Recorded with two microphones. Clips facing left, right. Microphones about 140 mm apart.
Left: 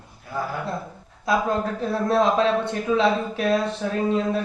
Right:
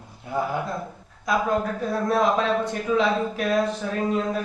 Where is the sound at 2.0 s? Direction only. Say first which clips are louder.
Left 2 dB; 30° left (ahead or behind).